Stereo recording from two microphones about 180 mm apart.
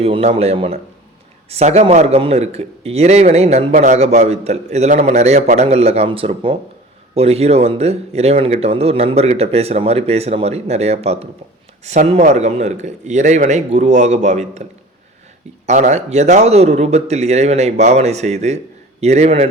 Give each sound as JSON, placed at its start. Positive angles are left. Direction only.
{"t": 0.0, "sound": "a man's voice", "side_deg": -35}
{"t": 15.6, "sound": "a man's voice", "side_deg": -40}